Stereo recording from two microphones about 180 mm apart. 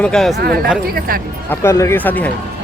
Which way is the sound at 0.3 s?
60° right (ahead or behind).